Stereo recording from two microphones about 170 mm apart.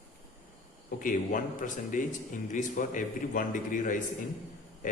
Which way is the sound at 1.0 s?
50° left (ahead or behind).